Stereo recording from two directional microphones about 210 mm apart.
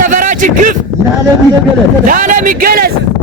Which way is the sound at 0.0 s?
40° right (ahead or behind).